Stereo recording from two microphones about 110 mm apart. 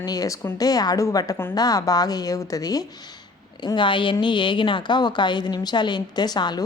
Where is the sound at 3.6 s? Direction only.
45° left (ahead or behind).